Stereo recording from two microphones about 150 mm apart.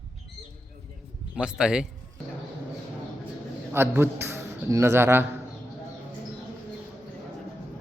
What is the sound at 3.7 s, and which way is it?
A man's voice, 15° right (ahead or behind).